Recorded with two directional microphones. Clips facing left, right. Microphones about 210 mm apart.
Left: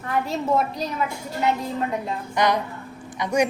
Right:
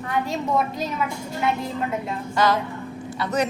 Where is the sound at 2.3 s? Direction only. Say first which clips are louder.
Right 1 dB; 20° left (ahead or behind).